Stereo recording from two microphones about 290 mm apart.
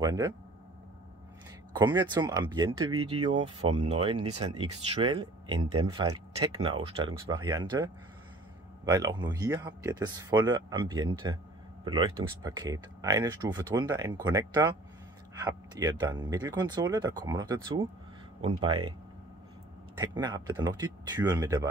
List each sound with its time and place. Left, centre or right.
0.0 s speech: centre
1.7 s speech: centre
3.6 s speech: right
3.9 s speech: centre
8.9 s speech: centre
20.0 s speech: centre